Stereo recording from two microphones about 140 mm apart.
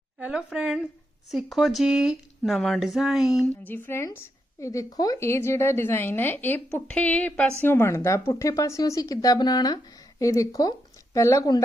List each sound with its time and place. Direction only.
0.2 s speech: 5° right (ahead or behind)
3.7 s a woman's voice: 15° left (ahead or behind)